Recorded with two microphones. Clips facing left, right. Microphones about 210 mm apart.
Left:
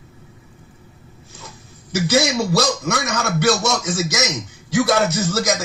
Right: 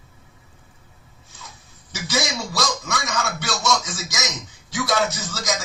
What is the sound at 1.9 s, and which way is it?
Music, 60° left (ahead or behind).